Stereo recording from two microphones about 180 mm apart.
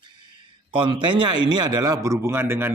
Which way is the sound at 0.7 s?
30° right (ahead or behind).